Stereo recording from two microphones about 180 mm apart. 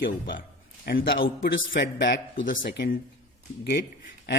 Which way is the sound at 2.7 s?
75° left (ahead or behind).